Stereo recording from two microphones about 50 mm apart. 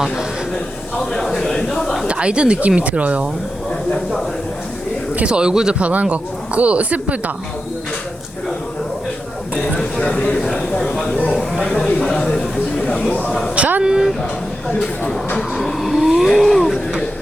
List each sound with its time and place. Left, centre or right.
1.1 s a sound: centre
2.0 s speech: right
5.1 s a man's voice: right
5.8 s speech: right
10.0 s speech: left
12.8 s speech: left
13.6 s speech: right
13.8 s a man's voice: centre
15.4 s vehicle: centre
16.4 s a sound: centre